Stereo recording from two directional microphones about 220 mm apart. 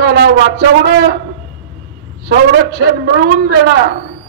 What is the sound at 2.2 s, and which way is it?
A man's voice, 45° right (ahead or behind).